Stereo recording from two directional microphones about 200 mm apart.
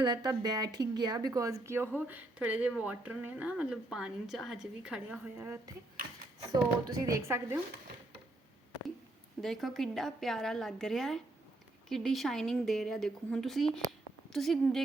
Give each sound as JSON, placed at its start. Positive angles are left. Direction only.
{"t": 0.0, "sound": "speech", "side_deg": -20}
{"t": 9.4, "sound": "speech", "side_deg": 0}